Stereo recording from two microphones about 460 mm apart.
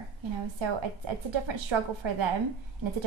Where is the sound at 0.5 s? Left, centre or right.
Right.